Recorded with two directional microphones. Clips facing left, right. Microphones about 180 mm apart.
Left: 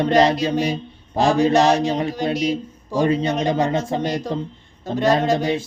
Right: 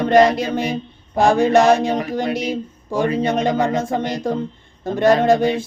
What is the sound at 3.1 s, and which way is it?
Speech, 25° left (ahead or behind).